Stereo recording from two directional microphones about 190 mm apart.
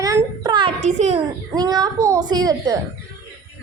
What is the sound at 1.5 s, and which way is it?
A child's voice, 20° right (ahead or behind).